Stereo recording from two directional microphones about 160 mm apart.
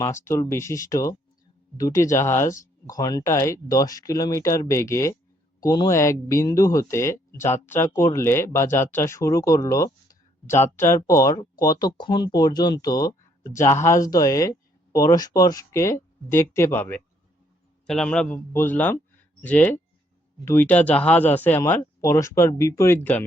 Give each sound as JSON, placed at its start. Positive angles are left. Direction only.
{"t": 0.0, "sound": "speech", "side_deg": 15}